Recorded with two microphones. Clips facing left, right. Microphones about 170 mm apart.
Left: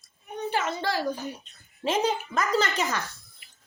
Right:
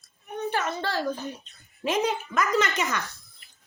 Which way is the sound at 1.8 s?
30° left (ahead or behind).